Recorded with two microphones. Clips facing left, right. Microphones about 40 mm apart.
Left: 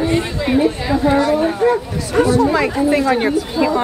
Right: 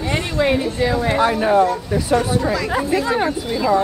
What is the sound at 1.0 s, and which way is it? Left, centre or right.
Speech, right.